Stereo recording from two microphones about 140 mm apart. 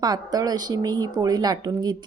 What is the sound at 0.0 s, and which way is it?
Speech, 30° right (ahead or behind).